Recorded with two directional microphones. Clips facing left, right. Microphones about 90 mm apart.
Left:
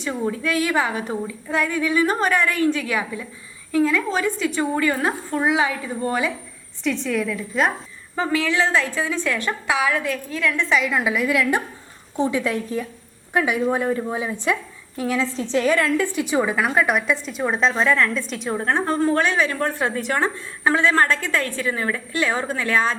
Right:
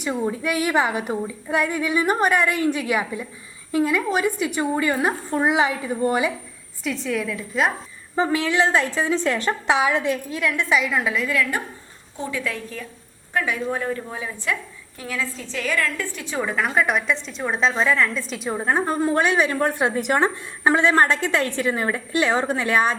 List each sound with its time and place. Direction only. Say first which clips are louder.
0.0 s a woman's voice: even; 15° right (ahead or behind)
6.8 s a woman's voice: left 2 dB; centre (ahead or behind)
8.1 s a woman's voice: right 1 dB; 20° right (ahead or behind); by 15.9 s 25° left (ahead or behind)
16.3 s a woman's voice: left 1 dB; 10° left (ahead or behind); by 23.0 s 15° right (ahead or behind)